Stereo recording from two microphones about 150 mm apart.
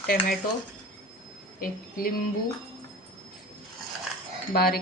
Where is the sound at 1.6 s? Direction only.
75° left (ahead or behind).